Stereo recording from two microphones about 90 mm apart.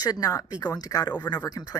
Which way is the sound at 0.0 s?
45° left (ahead or behind).